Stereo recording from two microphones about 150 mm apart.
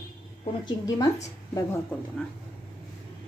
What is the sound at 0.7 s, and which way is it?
Speech, 25° left (ahead or behind).